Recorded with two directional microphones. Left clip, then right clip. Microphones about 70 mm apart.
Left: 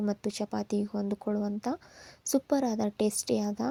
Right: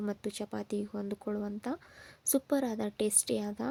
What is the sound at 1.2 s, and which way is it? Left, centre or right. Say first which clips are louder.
Speech: left 5 dB; centre.